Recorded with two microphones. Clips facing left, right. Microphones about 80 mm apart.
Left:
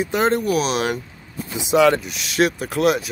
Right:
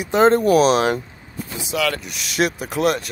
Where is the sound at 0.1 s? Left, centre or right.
Right.